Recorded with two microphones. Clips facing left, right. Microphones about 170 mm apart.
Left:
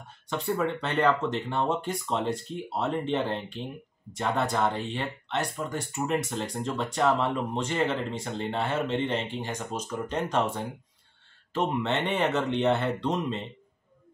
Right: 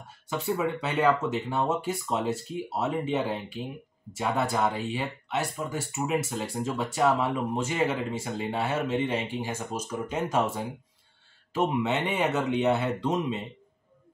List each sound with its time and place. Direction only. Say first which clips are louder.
0.3 s speech: even; 5° right (ahead or behind)